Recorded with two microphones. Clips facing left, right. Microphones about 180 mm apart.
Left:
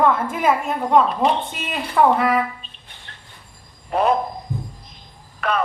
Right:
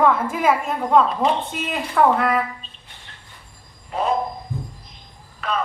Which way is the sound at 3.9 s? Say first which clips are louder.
Left 4 dB; 65° left (ahead or behind).